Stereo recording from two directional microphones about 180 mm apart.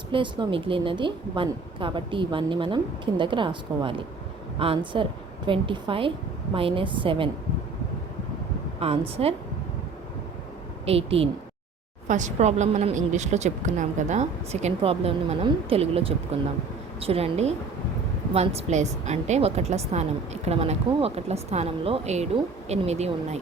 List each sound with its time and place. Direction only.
0.1 s a woman's voice: 30° right (ahead or behind)
8.8 s speech: 35° right (ahead or behind)
10.8 s speech: 35° right (ahead or behind)